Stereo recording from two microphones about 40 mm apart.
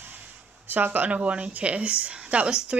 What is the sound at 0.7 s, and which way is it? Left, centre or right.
Speech, right.